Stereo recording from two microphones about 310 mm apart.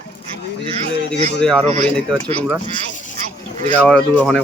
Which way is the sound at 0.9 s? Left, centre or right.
Left.